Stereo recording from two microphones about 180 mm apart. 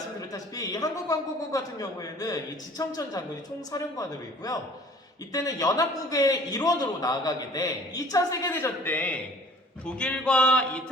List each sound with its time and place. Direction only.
0.2 s a man's voice: 20° left (ahead or behind)